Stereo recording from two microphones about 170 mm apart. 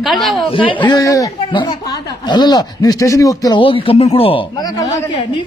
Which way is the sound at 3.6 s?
30° left (ahead or behind).